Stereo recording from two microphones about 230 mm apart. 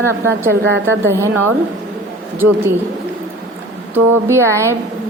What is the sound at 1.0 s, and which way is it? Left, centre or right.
Speech, centre.